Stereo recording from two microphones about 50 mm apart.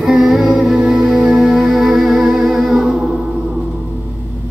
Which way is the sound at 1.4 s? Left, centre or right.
Centre.